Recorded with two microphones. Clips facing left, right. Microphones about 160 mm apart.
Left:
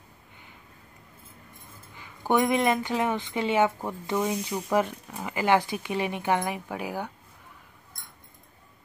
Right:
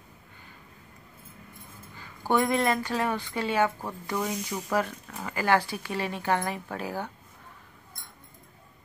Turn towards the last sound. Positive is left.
turn(degrees=15)  # may be behind; listen again after turning